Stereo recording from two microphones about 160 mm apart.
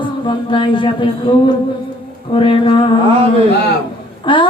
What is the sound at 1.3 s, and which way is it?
Mantra, 30° left (ahead or behind).